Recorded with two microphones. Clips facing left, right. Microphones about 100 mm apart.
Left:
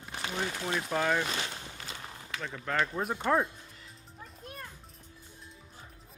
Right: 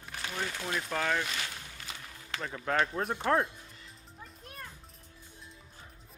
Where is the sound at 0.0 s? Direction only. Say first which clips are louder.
Left 2 dB; 20° left (ahead or behind).